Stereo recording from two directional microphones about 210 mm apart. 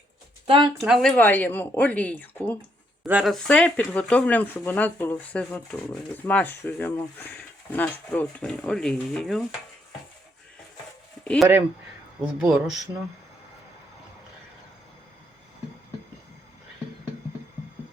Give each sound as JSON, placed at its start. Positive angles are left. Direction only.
{"t": 0.4, "sound": "speech", "side_deg": -25}
{"t": 0.8, "sound": "speech", "side_deg": 0}
{"t": 3.1, "sound": "speech", "side_deg": -5}
{"t": 11.2, "sound": "a sound", "side_deg": 5}
{"t": 12.2, "sound": "speech", "side_deg": -5}